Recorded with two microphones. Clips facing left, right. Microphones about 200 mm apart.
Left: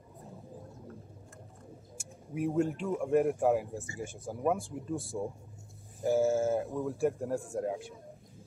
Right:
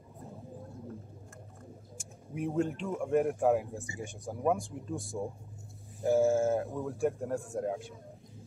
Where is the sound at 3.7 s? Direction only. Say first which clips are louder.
Left 1 dB; 15° right (ahead or behind).